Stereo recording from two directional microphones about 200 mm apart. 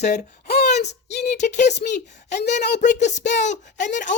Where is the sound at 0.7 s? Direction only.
35° left (ahead or behind).